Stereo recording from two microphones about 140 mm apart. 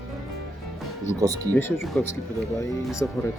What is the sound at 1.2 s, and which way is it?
Speech, 25° right (ahead or behind).